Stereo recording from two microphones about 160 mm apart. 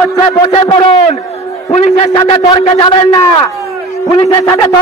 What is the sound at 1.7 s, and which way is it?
Speech, 45° left (ahead or behind).